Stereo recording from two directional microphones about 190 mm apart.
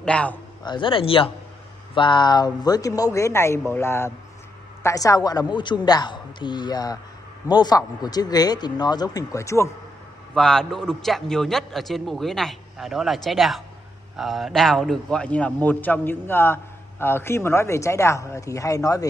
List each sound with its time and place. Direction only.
0.0 s a man's voice: 5° left (ahead or behind)
0.7 s a man's voice: 25° left (ahead or behind)
10.3 s a man's voice: 5° left (ahead or behind)